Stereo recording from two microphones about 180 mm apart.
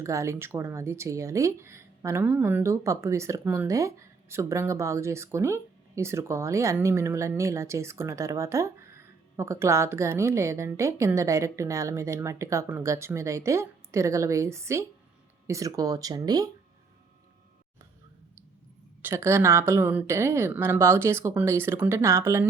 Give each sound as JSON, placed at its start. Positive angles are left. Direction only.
{"t": 0.0, "sound": "speech", "side_deg": -15}
{"t": 19.0, "sound": "speech", "side_deg": -15}